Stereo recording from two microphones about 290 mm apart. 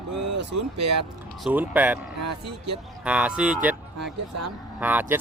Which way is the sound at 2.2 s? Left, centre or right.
Right.